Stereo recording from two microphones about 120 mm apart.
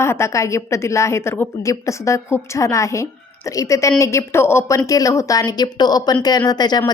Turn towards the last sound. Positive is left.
turn(degrees=35)  # may be behind; listen again after turning